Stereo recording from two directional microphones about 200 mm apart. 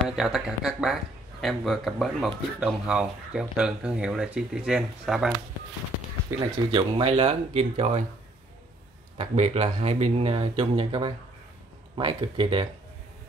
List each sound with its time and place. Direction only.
0.0 s speech: centre (ahead or behind)
6.3 s speech: 15° right (ahead or behind)
6.7 s speech: 25° right (ahead or behind)
9.2 s speech: 30° right (ahead or behind)